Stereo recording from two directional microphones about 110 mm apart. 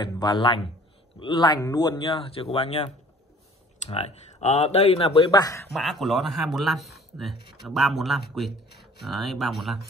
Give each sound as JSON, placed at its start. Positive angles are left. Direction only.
{"t": 0.0, "sound": "a man's voice", "side_deg": 40}
{"t": 2.1, "sound": "speech", "side_deg": 60}
{"t": 5.7, "sound": "a man's voice", "side_deg": 0}